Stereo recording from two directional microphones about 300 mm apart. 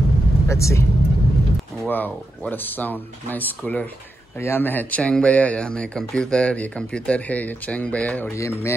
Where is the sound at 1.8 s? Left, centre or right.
Centre.